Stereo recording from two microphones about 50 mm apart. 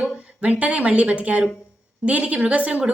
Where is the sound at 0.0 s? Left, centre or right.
Right.